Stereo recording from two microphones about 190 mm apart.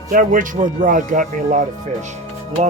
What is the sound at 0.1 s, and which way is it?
Music, 45° right (ahead or behind).